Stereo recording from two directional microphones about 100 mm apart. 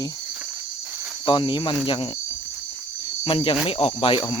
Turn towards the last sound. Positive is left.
turn(degrees=60)  # may be behind; listen again after turning